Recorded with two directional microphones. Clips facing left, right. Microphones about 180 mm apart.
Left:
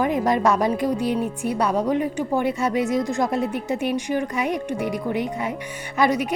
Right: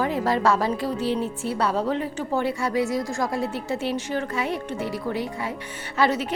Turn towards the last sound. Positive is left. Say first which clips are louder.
# left 2 dB
turn(degrees=15)  # may be behind; listen again after turning